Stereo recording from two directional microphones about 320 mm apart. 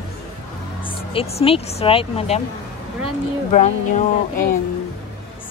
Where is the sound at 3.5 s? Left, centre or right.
Left.